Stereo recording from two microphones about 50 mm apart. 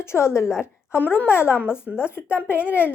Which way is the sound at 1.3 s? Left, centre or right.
Left.